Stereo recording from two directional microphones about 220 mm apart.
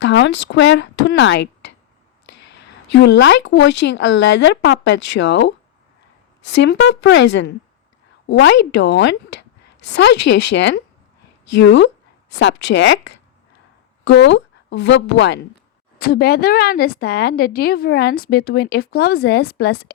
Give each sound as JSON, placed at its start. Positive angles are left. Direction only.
{"t": 0.0, "sound": "a woman's voice", "side_deg": 55}